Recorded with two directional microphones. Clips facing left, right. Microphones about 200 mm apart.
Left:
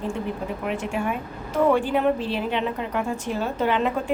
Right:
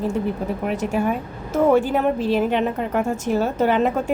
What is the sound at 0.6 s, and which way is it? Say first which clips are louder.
A woman's voice: right 5 dB; 40° right (ahead or behind).